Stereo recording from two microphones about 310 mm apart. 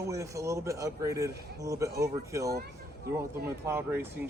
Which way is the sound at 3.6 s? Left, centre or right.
Centre.